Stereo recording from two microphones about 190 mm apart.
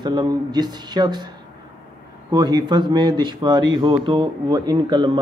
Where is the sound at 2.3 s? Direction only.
20° right (ahead or behind).